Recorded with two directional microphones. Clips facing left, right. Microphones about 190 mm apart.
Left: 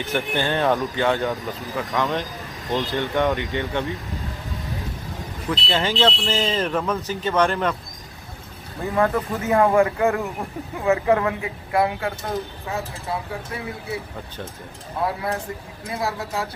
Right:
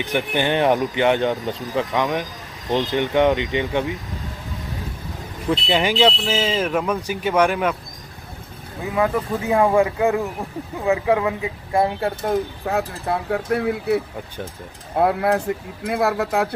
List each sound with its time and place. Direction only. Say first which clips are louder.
0.0 s speech: right 2 dB; 15° right (ahead or behind)
5.7 s speech: right 3 dB; 15° right (ahead or behind)
8.8 s speech: even; 5° right (ahead or behind); by 12.1 s 25° right (ahead or behind)
12.2 s speech: right 6 dB; 60° right (ahead or behind)